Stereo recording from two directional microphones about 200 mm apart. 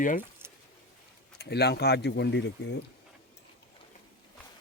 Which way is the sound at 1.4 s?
55° left (ahead or behind).